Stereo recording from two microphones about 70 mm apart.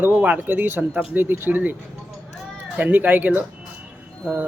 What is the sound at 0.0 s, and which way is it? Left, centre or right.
Speech, right.